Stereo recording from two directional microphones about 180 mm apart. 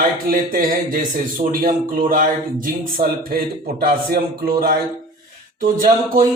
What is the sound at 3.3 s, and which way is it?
A man's voice, 55° right (ahead or behind).